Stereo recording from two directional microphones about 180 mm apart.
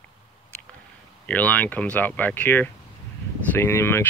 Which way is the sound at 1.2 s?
10° left (ahead or behind).